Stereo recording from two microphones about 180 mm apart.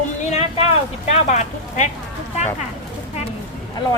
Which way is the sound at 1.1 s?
40° left (ahead or behind).